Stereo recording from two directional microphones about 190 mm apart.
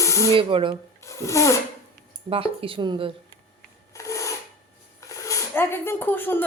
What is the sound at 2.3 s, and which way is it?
Speech, 30° right (ahead or behind).